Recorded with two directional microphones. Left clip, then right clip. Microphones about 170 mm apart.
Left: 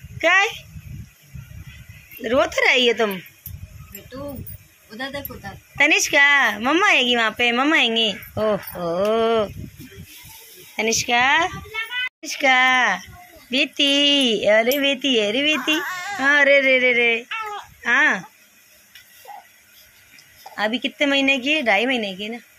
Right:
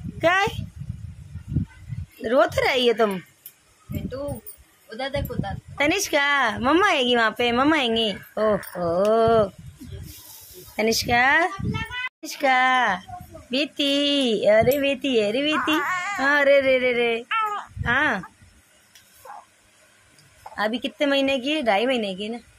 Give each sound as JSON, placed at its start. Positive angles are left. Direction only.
{"t": 0.2, "sound": "a woman's voice", "side_deg": -15}
{"t": 2.2, "sound": "a woman's voice", "side_deg": -10}
{"t": 4.8, "sound": "speech", "side_deg": -55}
{"t": 5.8, "sound": "a woman's voice", "side_deg": -10}
{"t": 10.8, "sound": "speech", "side_deg": -20}
{"t": 12.2, "sound": "a woman's voice", "side_deg": -5}
{"t": 16.2, "sound": "speech", "side_deg": -5}
{"t": 20.5, "sound": "a woman's voice", "side_deg": -5}